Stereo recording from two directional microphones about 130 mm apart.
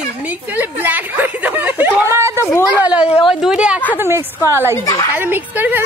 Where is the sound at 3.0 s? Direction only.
50° left (ahead or behind).